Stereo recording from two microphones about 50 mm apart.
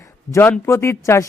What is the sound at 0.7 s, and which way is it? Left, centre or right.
Speech, left.